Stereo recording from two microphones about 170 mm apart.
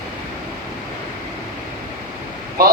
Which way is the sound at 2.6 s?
60° right (ahead or behind).